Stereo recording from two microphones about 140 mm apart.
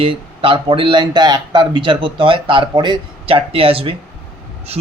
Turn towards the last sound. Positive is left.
turn(degrees=-40)  # may be behind; listen again after turning